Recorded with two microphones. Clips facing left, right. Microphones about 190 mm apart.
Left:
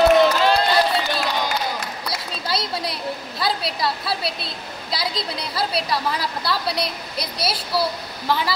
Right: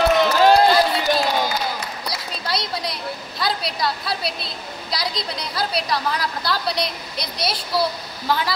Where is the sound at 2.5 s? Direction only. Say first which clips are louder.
Even; 5° left (ahead or behind).